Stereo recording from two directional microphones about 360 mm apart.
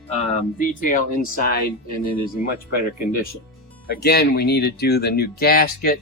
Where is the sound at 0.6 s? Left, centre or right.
Left.